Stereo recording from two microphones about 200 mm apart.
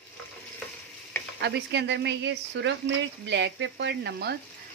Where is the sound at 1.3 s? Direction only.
60° right (ahead or behind).